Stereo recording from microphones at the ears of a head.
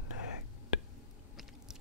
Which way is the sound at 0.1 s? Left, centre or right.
Left.